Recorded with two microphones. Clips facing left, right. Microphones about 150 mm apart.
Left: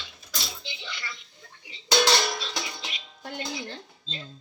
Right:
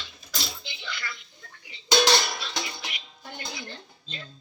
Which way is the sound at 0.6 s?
25° left (ahead or behind).